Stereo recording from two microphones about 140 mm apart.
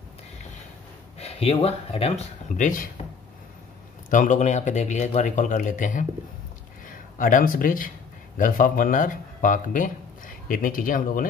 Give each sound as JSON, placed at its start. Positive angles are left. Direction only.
{"t": 1.2, "sound": "speech", "side_deg": 45}
{"t": 4.1, "sound": "speech", "side_deg": 60}
{"t": 7.2, "sound": "speech", "side_deg": 75}